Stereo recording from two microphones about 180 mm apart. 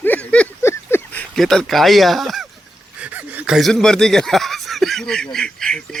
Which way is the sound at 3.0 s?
10° right (ahead or behind).